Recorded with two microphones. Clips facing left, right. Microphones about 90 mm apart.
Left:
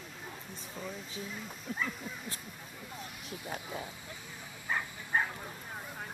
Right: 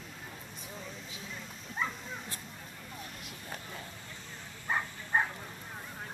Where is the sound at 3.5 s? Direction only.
10° left (ahead or behind).